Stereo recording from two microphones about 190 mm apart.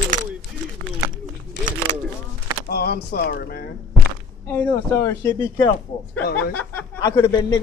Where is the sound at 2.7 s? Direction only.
55° left (ahead or behind).